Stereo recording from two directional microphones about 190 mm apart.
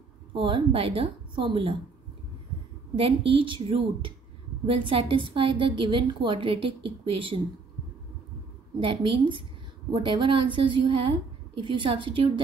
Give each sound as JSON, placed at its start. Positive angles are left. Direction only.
{"t": 0.3, "sound": "a woman's voice", "side_deg": -25}
{"t": 3.0, "sound": "a woman's voice", "side_deg": -30}
{"t": 8.7, "sound": "a woman's voice", "side_deg": -25}